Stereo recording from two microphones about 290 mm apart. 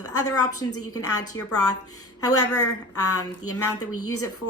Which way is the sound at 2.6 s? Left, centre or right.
Left.